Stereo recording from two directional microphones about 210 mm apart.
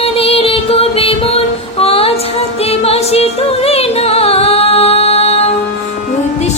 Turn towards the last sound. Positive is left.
turn(degrees=30)  # may be behind; listen again after turning